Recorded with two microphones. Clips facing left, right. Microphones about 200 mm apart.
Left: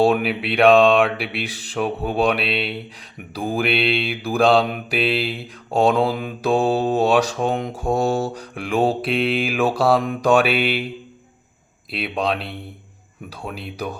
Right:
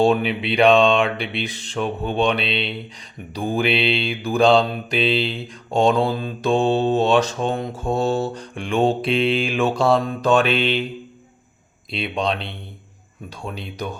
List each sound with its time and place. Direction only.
0.0 s mantra: 5° left (ahead or behind)
4.6 s mantra: 15° left (ahead or behind)
11.9 s mantra: 5° left (ahead or behind)